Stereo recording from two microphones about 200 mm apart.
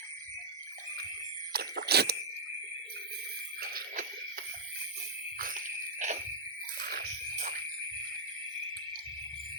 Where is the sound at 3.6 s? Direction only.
45° right (ahead or behind).